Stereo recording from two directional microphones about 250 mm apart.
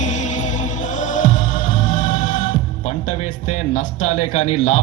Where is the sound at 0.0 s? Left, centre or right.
Left.